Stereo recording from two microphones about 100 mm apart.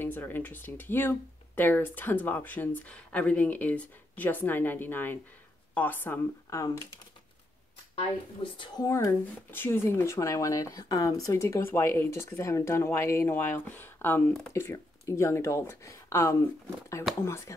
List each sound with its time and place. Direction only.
0.0 s speech: 20° left (ahead or behind)
6.5 s speech: 35° left (ahead or behind)
8.7 s speech: 35° left (ahead or behind)
9.5 s speech: 20° left (ahead or behind)